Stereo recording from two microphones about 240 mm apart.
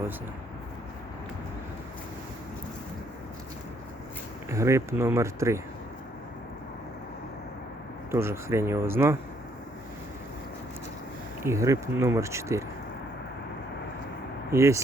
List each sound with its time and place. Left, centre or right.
4.4 s speech: centre
8.1 s speech: centre
11.4 s speech: centre
14.5 s speech: centre